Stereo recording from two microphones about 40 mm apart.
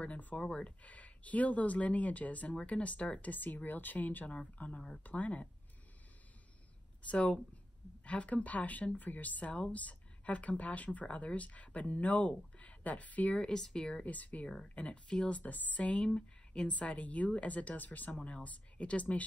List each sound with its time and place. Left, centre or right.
0.0 s speech: left
0.5 s speech: left
0.8 s speech: left
3.3 s speech: left
4.6 s speech: left
7.0 s speech: left
13.4 s speech: centre
14.0 s speech: left
14.8 s speech: left
15.4 s speech: left